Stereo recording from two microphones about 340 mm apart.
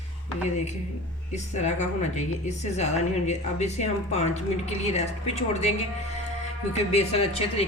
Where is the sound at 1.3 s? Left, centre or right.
Centre.